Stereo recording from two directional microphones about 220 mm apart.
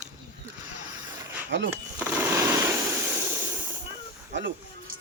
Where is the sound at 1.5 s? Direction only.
55° right (ahead or behind).